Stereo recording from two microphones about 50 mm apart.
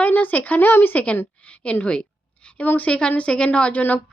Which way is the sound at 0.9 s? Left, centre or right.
Left.